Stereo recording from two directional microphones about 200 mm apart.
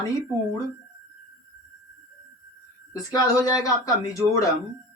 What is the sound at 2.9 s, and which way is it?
Speech, 15° left (ahead or behind).